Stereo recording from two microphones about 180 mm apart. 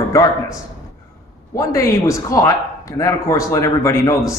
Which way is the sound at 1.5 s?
15° left (ahead or behind).